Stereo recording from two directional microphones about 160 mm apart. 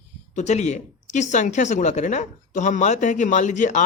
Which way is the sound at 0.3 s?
45° left (ahead or behind).